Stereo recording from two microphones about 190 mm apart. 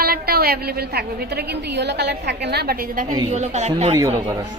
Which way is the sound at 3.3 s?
35° right (ahead or behind).